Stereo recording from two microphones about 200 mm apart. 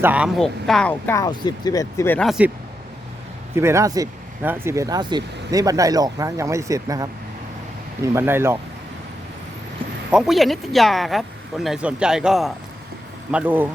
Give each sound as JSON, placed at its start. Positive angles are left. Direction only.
{"t": 0.0, "sound": "speech", "side_deg": -5}
{"t": 3.5, "sound": "speech", "side_deg": -15}
{"t": 10.1, "sound": "speech", "side_deg": 0}